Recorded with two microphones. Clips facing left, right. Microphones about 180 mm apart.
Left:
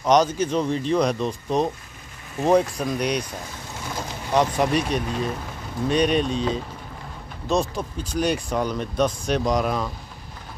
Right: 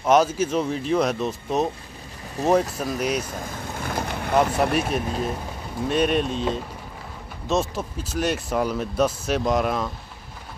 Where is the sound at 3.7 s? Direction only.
55° right (ahead or behind).